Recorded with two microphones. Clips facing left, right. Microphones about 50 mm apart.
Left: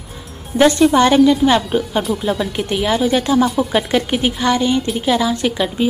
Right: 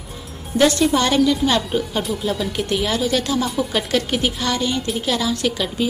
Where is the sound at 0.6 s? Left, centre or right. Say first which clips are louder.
Left 5 dB; left.